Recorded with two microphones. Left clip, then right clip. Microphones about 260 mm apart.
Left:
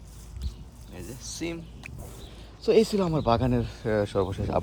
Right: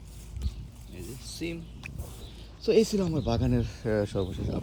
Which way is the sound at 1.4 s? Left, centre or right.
Centre.